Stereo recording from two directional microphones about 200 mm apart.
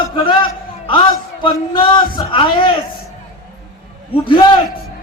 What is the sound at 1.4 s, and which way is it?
Speech, 25° left (ahead or behind).